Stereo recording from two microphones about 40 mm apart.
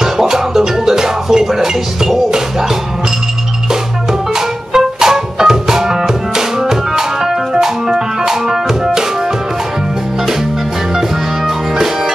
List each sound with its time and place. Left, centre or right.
0.0 s music: centre
4.4 s music: centre
11.0 s music: centre